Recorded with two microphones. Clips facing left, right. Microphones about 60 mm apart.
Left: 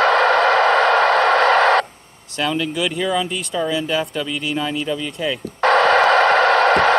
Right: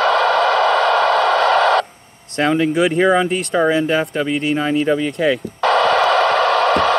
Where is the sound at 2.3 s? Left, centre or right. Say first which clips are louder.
Right 6 dB; right.